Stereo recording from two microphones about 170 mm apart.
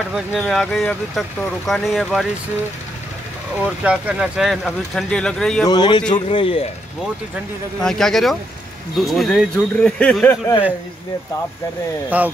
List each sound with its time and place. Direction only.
0.1 s speech: centre (ahead or behind)
3.6 s speech: 5° right (ahead or behind)
5.7 s a man's voice: 30° left (ahead or behind)
7.8 s speech: 5° left (ahead or behind)
12.1 s speech: 10° right (ahead or behind)